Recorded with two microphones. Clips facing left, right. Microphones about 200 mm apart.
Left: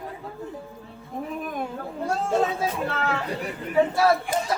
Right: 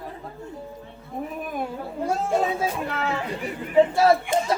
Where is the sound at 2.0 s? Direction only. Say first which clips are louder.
Even; 10° right (ahead or behind).